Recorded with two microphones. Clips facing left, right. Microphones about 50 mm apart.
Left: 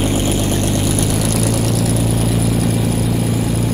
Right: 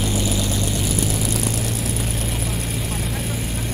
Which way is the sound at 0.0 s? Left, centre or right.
Left.